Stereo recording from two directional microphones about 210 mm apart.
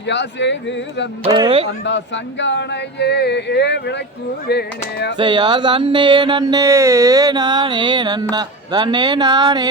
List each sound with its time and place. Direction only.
0.1 s speech: 55° left (ahead or behind)
1.3 s music: 20° right (ahead or behind)
1.8 s speech: 60° left (ahead or behind)
5.1 s music: 20° right (ahead or behind)